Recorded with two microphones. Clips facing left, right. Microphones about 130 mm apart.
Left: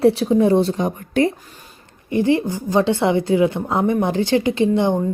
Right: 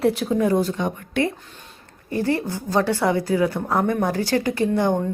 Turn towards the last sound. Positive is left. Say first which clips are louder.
# left 3 dB
turn(degrees=20)  # may be behind; listen again after turning